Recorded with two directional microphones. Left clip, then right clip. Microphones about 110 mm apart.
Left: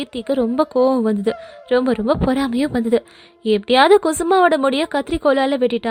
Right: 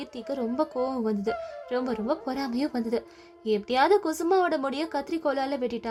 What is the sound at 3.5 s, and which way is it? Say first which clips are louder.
Speech: left 10 dB; 65° left (ahead or behind).